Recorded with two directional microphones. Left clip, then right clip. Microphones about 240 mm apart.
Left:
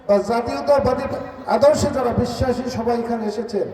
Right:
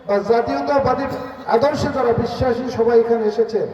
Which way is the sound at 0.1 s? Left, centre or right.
Left.